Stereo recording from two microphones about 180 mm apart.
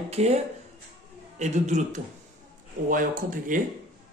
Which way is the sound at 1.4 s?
40° right (ahead or behind).